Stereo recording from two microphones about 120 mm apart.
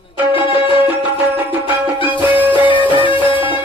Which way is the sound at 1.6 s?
15° right (ahead or behind).